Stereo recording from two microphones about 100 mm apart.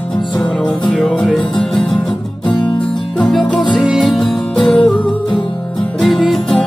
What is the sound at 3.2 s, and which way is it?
Music, 5° left (ahead or behind).